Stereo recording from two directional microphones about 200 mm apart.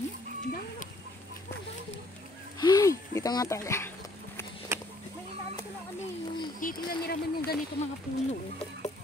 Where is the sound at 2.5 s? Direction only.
20° left (ahead or behind).